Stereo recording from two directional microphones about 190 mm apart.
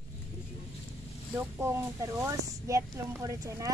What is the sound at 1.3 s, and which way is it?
Speech, 15° right (ahead or behind).